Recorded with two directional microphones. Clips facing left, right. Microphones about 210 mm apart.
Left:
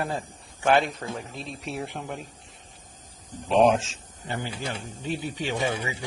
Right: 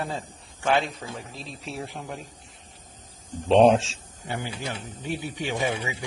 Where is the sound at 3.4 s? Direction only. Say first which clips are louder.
Right 3 dB; 30° right (ahead or behind).